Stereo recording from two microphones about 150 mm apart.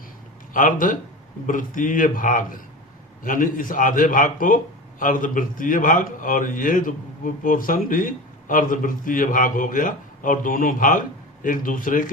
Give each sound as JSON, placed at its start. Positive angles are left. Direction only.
{"t": 0.5, "sound": "a man's voice", "side_deg": 65}